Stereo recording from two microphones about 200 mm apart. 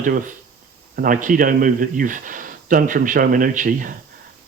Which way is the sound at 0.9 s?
40° right (ahead or behind).